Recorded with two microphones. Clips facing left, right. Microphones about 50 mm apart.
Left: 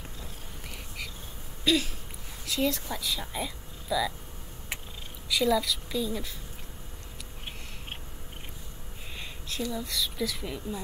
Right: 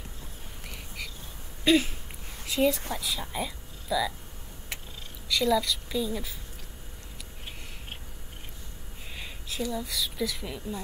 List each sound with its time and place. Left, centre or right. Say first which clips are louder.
1.6 s a sound: right 4 dB; right
2.9 s speech: right 1 dB; centre
5.3 s speech: even; centre
9.1 s a woman's voice: even; centre